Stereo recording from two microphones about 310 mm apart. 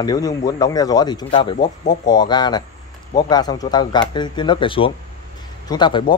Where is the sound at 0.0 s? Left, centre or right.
Centre.